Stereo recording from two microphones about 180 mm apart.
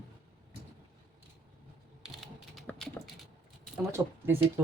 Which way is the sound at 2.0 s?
Centre (ahead or behind).